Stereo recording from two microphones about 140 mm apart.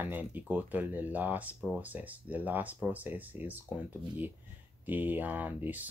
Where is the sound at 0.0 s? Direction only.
10° right (ahead or behind).